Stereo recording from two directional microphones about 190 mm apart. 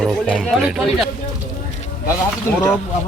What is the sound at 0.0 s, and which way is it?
Speech, 5° left (ahead or behind).